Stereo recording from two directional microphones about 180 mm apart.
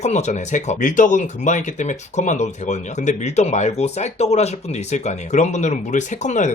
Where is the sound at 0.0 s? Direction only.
40° left (ahead or behind).